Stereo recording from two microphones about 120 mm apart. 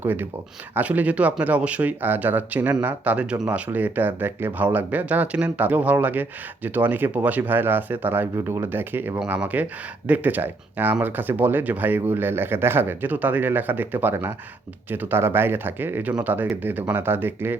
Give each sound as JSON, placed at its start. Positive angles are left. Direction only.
{"t": 0.0, "sound": "speech", "side_deg": -15}